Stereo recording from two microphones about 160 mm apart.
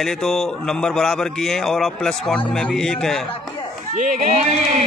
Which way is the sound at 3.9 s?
50° right (ahead or behind).